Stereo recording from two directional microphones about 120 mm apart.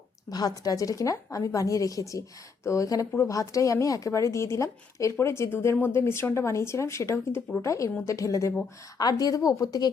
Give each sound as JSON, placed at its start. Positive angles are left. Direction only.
{"t": 0.3, "sound": "a woman's voice", "side_deg": 35}